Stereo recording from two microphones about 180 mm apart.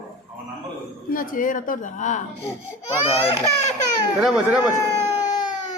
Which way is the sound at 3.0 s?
30° left (ahead or behind).